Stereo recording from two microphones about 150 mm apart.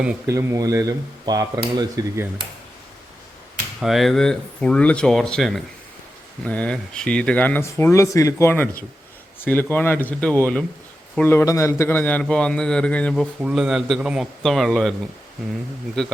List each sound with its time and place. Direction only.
0.0 s speech: 10° right (ahead or behind)
0.3 s speech: 20° right (ahead or behind)
3.8 s speech: centre (ahead or behind)
13.4 s speech: 5° right (ahead or behind)
16.0 s speech: 5° left (ahead or behind)